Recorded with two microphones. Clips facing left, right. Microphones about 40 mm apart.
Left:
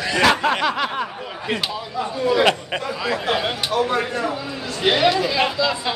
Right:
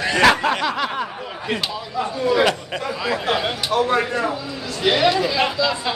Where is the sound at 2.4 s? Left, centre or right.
Left.